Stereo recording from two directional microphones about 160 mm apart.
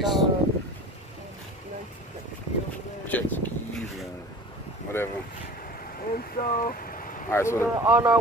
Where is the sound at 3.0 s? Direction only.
10° left (ahead or behind).